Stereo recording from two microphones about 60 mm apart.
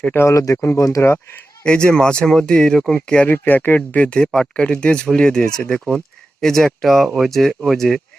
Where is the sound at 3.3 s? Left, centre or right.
Left.